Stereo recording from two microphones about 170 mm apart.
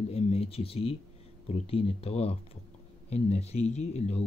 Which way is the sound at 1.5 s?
35° left (ahead or behind).